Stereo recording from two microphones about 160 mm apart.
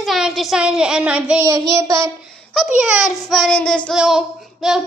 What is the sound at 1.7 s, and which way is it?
Child singing, 20° right (ahead or behind).